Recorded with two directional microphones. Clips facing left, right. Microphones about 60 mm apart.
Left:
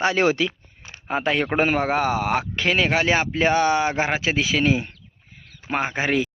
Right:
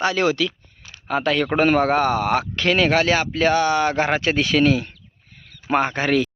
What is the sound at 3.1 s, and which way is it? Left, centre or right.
Speech, left.